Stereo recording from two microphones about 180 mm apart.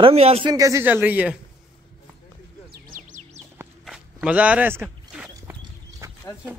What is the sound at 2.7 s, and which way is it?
Bird, 50° right (ahead or behind).